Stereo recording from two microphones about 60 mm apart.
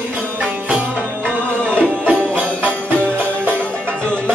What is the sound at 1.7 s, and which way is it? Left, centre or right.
Music, right.